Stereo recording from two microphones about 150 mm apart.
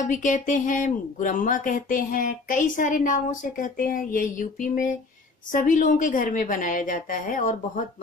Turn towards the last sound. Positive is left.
turn(degrees=60)  # may be behind; listen again after turning